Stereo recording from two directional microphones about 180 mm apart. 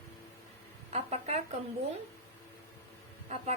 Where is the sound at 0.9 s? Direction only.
35° right (ahead or behind).